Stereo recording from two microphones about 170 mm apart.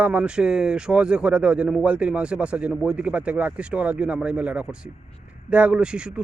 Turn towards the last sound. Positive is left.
turn(degrees=-5)  # may be behind; listen again after turning